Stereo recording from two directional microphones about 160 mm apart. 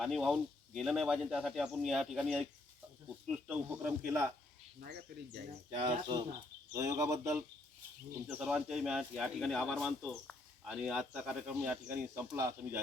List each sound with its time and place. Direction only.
0.0 s speech: centre (ahead or behind)
4.0 s speech: 15° right (ahead or behind)
4.8 s speech: 90° right
5.7 s speech: 35° right (ahead or behind)
8.3 s speech: 5° right (ahead or behind)